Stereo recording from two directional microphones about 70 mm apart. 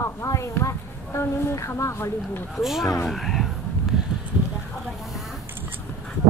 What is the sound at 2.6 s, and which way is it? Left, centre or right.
Speech, centre.